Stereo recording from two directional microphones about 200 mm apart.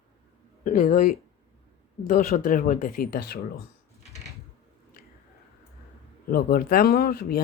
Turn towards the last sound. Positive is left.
turn(degrees=45)  # may be behind; listen again after turning